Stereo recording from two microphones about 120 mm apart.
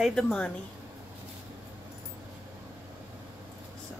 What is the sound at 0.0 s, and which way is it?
Speech, 5° left (ahead or behind).